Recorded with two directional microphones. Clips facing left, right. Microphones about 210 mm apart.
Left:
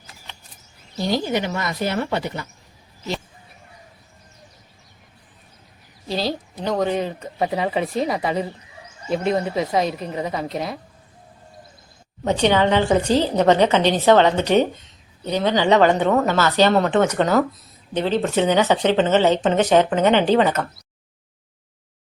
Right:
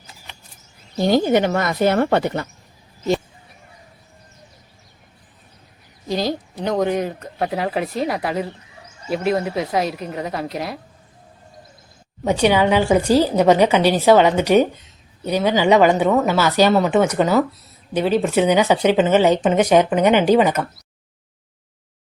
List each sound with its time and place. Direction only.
0.9 s speech: 50° right (ahead or behind)
6.1 s a sound: 15° right (ahead or behind)
6.8 s speech: 10° right (ahead or behind)
7.2 s speech: centre (ahead or behind)
12.2 s speech: 10° right (ahead or behind)